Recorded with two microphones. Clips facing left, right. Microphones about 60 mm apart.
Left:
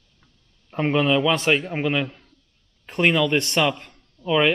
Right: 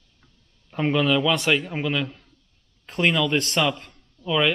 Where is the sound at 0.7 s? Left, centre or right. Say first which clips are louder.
Left 1 dB; centre.